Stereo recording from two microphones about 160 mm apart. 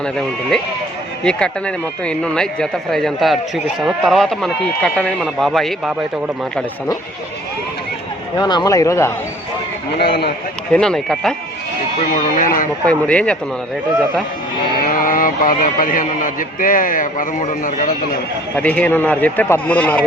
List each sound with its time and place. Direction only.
0.0 s a man's voice: 5° left (ahead or behind)
8.4 s speech: 25° left (ahead or behind)
10.0 s speech: 85° left
10.7 s a man's voice: 5° left (ahead or behind)
11.9 s speech: 55° left (ahead or behind)
12.8 s a man's voice: 5° left (ahead or behind)
14.8 s speech: 65° left (ahead or behind)
18.5 s a man's voice: 10° left (ahead or behind)